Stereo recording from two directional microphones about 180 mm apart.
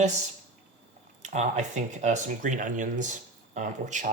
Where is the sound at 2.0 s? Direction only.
45° right (ahead or behind).